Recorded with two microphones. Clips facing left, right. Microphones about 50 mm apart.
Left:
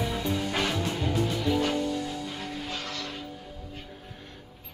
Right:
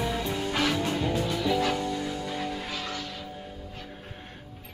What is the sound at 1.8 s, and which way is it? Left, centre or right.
Music, right.